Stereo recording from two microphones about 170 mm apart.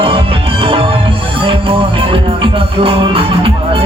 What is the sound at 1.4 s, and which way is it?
Music, 30° right (ahead or behind).